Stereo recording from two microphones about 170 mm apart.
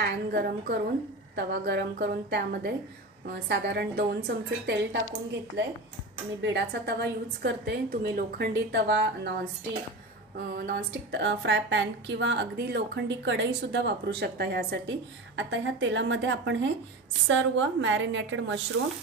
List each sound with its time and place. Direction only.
0.0 s a woman's voice: 70° right (ahead or behind)
6.4 s a woman's voice: 80° right
10.3 s a woman's voice: 65° right (ahead or behind); by 18.6 s 90° right